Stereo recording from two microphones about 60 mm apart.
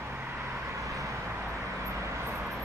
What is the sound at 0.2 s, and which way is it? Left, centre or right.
Vehicle, right.